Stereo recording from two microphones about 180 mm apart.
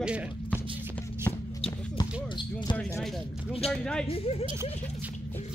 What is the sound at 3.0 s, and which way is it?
Speech, centre (ahead or behind).